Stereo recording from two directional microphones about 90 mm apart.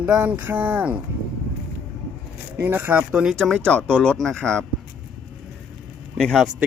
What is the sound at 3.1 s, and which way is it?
Speech, 10° right (ahead or behind).